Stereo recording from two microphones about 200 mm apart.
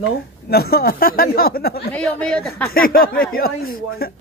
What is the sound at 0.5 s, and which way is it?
Speech, 50° left (ahead or behind).